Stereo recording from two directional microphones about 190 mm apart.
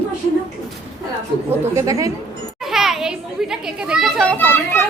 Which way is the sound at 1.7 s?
20° right (ahead or behind).